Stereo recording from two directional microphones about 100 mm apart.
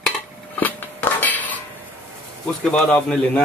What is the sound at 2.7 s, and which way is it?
Speech, 10° left (ahead or behind).